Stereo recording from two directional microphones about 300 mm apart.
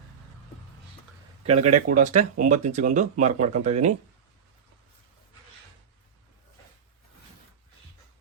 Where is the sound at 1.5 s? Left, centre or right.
Right.